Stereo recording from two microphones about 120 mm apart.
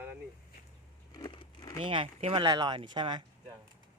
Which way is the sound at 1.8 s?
45° right (ahead or behind).